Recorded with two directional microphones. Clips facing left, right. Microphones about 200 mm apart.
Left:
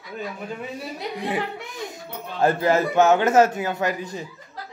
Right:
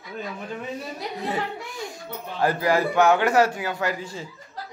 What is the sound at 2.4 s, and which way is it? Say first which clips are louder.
Speech: left 2 dB; 25° left (ahead or behind).